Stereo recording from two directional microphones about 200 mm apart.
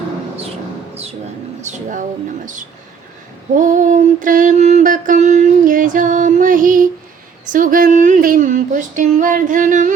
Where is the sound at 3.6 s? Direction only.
40° right (ahead or behind).